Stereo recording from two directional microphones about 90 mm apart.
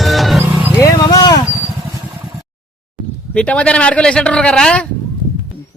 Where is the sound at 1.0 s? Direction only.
50° left (ahead or behind).